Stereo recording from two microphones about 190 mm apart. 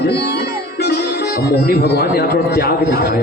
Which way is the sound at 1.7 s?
55° left (ahead or behind).